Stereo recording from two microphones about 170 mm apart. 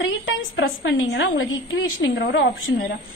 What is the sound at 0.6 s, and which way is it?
A woman's voice, 90° left.